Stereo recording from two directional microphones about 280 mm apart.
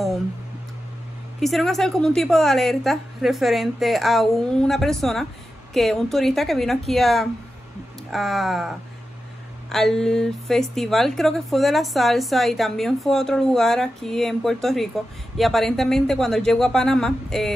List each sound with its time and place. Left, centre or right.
1.4 s a woman's voice: centre